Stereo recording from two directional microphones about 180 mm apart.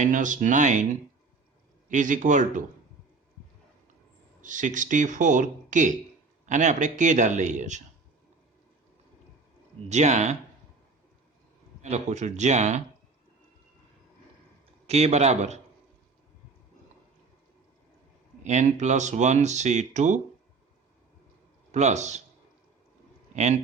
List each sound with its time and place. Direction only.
0.0 s speech: 45° right (ahead or behind)
1.9 s speech: 45° right (ahead or behind)
4.4 s speech: 45° right (ahead or behind)
9.9 s speech: 40° right (ahead or behind)
11.8 s speech: 40° right (ahead or behind)
14.8 s speech: 35° right (ahead or behind)
18.4 s speech: 40° right (ahead or behind)
21.7 s speech: 40° right (ahead or behind)
23.3 s speech: 40° right (ahead or behind)